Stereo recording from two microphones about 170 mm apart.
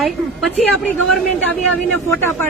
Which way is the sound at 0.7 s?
5° left (ahead or behind).